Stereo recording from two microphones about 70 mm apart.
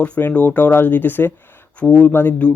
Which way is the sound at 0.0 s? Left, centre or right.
Left.